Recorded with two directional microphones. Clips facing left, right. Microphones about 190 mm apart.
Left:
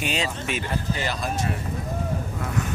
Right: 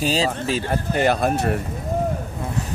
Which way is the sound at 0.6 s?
55° right (ahead or behind).